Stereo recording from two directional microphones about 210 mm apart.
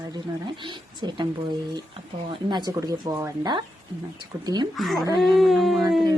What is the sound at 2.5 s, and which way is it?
Speech, 20° right (ahead or behind).